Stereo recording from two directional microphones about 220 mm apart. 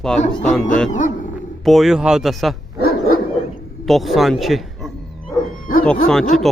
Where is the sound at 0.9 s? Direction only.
35° left (ahead or behind).